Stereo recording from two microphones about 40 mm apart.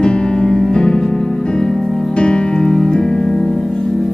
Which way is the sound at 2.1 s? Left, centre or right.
Left.